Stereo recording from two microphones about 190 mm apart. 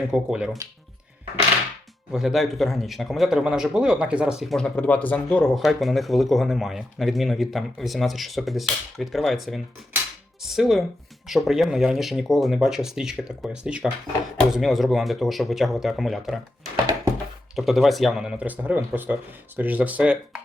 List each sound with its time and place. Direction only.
0.1 s a man's voice: 5° right (ahead or behind)
2.1 s a man's voice: centre (ahead or behind)
17.5 s a man's voice: centre (ahead or behind)